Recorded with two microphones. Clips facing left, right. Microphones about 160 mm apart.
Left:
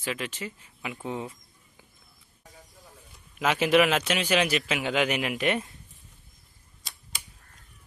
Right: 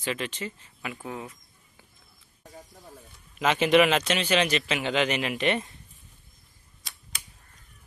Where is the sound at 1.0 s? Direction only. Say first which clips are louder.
Left 5 dB; 25° left (ahead or behind).